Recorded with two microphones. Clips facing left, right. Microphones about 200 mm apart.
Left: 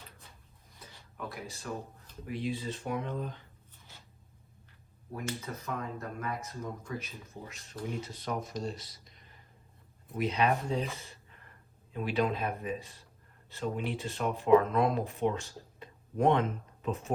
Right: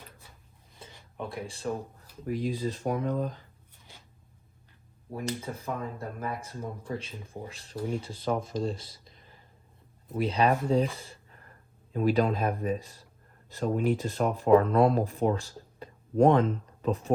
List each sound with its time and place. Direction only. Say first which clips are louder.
0.8 s a sound: right 4 dB; 25° right (ahead or behind)
2.2 s speech: right 5 dB; 40° right (ahead or behind)
5.2 s speech: right 4 dB; 30° right (ahead or behind)
11.9 s speech: right 5 dB; 45° right (ahead or behind)